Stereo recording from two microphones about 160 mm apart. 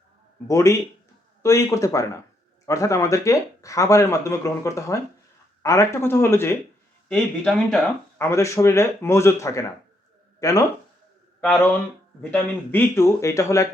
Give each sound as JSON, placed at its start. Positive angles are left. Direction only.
{"t": 0.4, "sound": "speech", "side_deg": 20}
{"t": 7.1, "sound": "speech", "side_deg": 5}
{"t": 8.2, "sound": "speech", "side_deg": 20}
{"t": 11.4, "sound": "speech", "side_deg": 10}